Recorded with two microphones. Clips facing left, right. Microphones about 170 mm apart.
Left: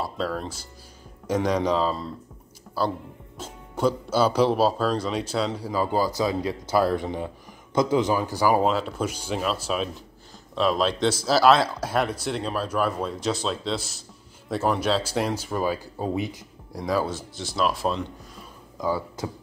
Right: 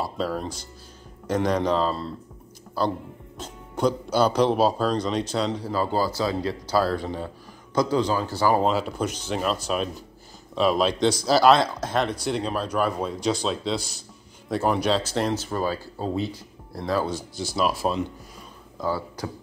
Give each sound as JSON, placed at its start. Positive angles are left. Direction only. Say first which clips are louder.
{"t": 0.0, "sound": "speech", "louder": "right 1 dB", "side_deg": 0}
{"t": 1.2, "sound": "speech", "louder": "even", "side_deg": 10}
{"t": 18.8, "sound": "speech", "louder": "left 1 dB", "side_deg": 15}